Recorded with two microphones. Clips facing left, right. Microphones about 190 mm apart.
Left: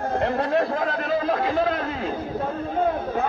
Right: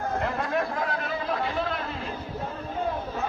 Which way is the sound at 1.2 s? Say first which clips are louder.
Left 6 dB; 40° left (ahead or behind).